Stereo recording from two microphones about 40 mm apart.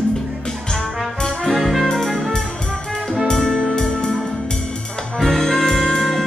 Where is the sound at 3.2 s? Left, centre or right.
Centre.